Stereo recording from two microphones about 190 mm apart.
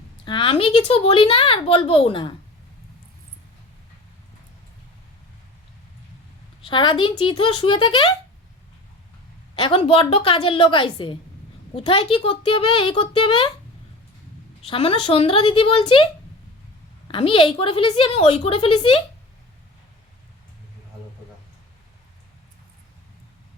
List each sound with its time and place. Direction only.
0.3 s a woman's voice: 25° left (ahead or behind)
6.7 s a woman's voice: 25° left (ahead or behind)
9.6 s a woman's voice: 30° left (ahead or behind)
14.7 s a woman's voice: 30° left (ahead or behind)
17.1 s a woman's voice: 30° left (ahead or behind)